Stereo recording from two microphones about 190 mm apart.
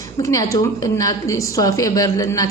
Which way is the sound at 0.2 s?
15° left (ahead or behind).